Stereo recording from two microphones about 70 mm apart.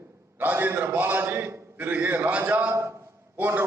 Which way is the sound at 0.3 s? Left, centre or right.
Right.